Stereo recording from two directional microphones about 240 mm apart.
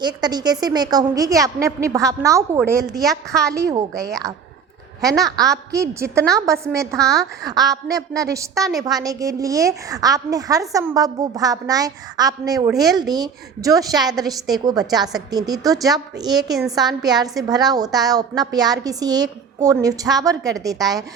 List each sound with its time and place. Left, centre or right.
0.0 s a woman's voice: centre
3.0 s a woman's voice: centre
3.5 s a woman's voice: centre
5.0 s a woman's voice: centre